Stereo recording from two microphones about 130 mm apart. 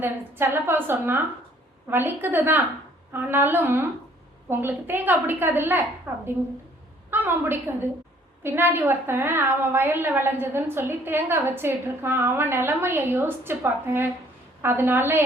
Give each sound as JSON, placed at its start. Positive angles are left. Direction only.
{"t": 0.0, "sound": "a woman's voice", "side_deg": -15}